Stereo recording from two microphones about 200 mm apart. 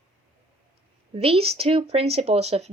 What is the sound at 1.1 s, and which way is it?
Speech, 30° right (ahead or behind).